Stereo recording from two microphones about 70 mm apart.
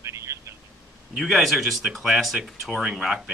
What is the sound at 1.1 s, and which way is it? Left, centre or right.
Speech, centre.